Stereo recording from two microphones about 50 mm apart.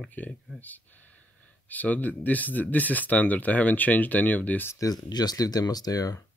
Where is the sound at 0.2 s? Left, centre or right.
Left.